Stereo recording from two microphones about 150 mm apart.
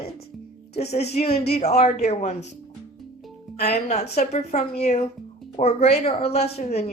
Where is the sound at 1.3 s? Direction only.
90° left.